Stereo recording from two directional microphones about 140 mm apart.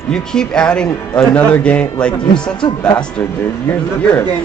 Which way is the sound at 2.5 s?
35° left (ahead or behind).